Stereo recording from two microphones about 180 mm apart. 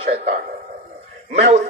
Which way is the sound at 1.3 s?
40° right (ahead or behind).